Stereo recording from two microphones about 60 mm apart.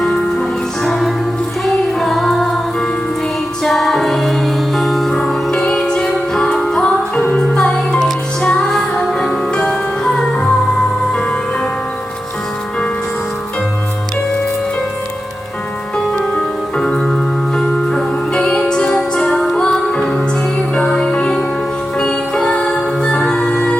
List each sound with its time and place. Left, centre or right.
0.0 s music: centre
3.6 s music: centre
16.7 s music: centre